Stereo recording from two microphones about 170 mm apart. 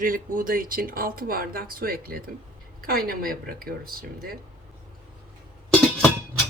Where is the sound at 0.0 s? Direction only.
55° right (ahead or behind).